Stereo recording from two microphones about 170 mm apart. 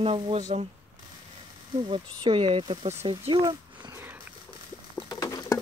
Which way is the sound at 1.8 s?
30° right (ahead or behind).